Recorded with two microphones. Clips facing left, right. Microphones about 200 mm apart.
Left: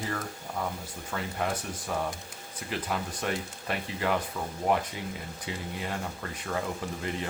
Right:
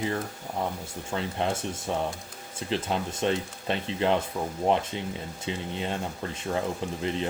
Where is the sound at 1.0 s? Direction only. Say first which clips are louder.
Right 3 dB; 25° right (ahead or behind).